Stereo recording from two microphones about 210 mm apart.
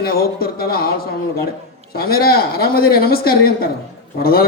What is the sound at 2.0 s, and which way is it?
A man's voice, 45° left (ahead or behind).